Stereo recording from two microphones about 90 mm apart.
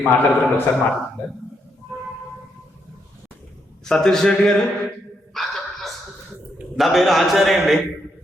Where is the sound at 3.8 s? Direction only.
5° left (ahead or behind).